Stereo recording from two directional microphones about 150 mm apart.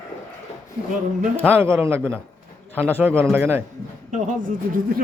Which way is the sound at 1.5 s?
15° right (ahead or behind).